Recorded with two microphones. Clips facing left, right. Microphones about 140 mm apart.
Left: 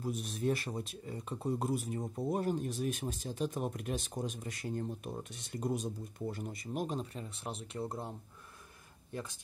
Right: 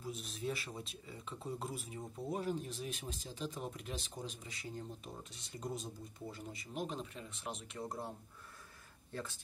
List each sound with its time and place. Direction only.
0.0 s speech: 55° left (ahead or behind)
6.6 s speech: 45° left (ahead or behind)
9.1 s speech: 15° left (ahead or behind)